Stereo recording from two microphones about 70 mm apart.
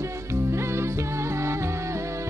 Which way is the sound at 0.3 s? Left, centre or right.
Right.